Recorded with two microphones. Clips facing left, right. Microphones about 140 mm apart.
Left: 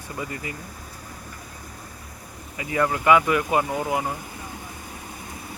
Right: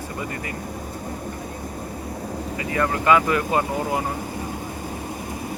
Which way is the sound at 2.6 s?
15° left (ahead or behind).